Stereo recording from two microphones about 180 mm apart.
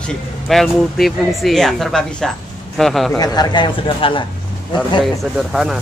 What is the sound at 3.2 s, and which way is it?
A man's voice, 20° left (ahead or behind).